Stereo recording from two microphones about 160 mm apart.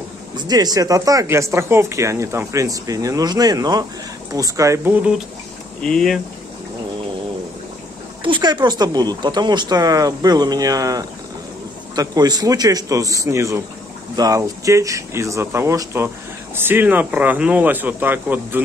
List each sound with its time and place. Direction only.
0.4 s speech: 25° right (ahead or behind)
5.8 s speech: 5° left (ahead or behind)
8.2 s speech: 30° right (ahead or behind); by 18.6 s 10° right (ahead or behind)